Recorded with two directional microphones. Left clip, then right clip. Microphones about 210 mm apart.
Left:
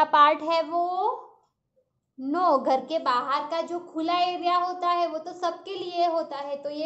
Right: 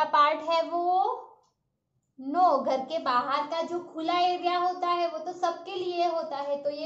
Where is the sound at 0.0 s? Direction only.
50° left (ahead or behind).